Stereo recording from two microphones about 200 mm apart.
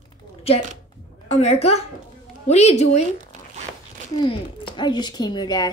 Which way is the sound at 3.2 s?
35° right (ahead or behind).